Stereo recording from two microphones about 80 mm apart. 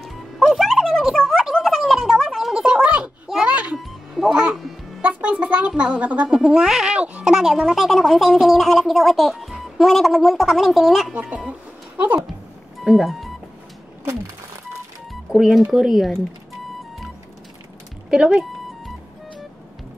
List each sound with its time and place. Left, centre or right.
0.0 s music: centre
3.7 s music: centre
5.0 s music: centre
5.7 s speech: centre
11.1 s speech: centre
12.8 s speech: centre
15.3 s speech: centre
18.1 s speech: centre